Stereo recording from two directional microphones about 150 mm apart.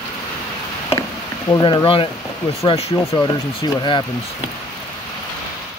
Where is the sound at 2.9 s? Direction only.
20° left (ahead or behind).